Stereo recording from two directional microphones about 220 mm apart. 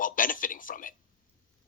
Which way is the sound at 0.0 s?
40° left (ahead or behind).